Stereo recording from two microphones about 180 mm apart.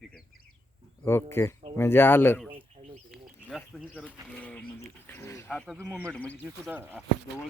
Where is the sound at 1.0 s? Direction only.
15° left (ahead or behind).